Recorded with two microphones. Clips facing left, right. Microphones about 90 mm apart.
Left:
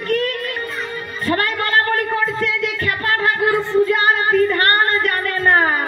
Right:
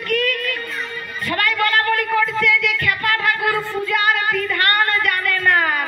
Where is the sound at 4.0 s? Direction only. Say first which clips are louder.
Left 4 dB; 35° left (ahead or behind).